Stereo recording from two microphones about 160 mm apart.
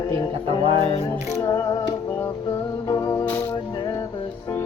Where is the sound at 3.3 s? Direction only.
10° left (ahead or behind).